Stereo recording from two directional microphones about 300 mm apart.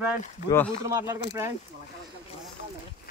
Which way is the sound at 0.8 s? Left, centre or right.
Centre.